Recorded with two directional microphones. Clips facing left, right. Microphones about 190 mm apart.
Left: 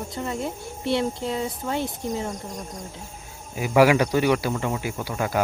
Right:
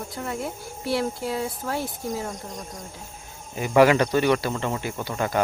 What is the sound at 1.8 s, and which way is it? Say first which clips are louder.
Speech: left 2 dB; 20° left (ahead or behind).